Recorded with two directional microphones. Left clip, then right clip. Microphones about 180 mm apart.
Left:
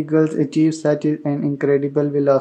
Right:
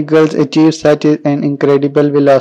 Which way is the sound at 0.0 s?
35° right (ahead or behind).